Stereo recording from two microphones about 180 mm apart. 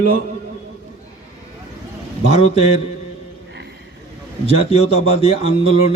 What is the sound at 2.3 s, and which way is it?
Speech, 35° left (ahead or behind).